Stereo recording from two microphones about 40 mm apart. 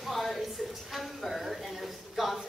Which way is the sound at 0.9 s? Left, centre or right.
Centre.